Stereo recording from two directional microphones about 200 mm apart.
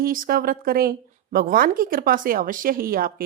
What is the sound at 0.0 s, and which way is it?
Speech, 45° right (ahead or behind).